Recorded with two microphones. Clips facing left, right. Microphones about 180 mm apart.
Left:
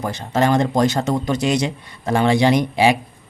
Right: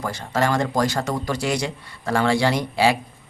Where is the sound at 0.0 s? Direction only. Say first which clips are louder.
Left 4 dB; 20° left (ahead or behind).